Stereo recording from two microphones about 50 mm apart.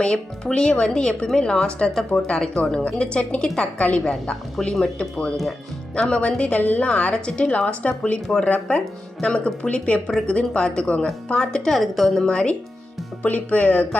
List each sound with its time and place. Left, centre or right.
0.0 s speech: centre
2.8 s a woman's voice: left
6.6 s a woman's voice: left
6.8 s a woman's voice: left
11.7 s a woman's voice: centre
12.2 s a woman's voice: centre